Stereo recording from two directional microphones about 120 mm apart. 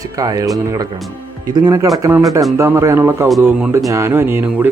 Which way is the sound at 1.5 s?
30° right (ahead or behind).